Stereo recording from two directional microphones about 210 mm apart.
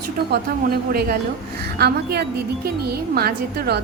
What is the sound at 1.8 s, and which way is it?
Speech, 50° right (ahead or behind).